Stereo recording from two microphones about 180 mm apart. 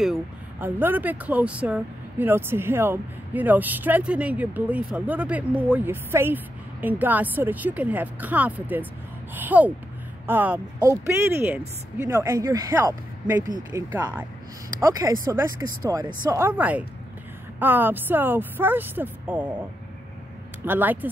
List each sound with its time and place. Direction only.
0.0 s speech: 5° right (ahead or behind)
20.6 s speech: 10° right (ahead or behind)